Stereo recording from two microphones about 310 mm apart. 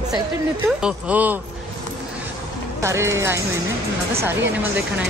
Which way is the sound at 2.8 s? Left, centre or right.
Centre.